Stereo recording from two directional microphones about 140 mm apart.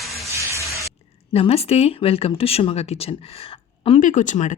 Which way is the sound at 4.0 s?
65° left (ahead or behind).